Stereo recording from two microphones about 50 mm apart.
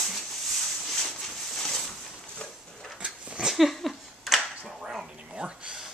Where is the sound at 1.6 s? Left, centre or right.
Centre.